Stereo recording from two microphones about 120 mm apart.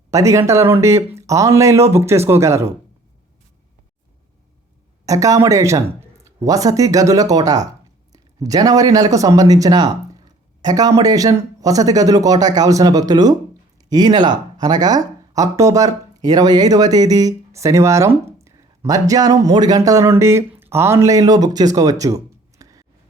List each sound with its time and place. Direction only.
0.1 s speech: 25° right (ahead or behind)
5.0 s speech: 25° right (ahead or behind)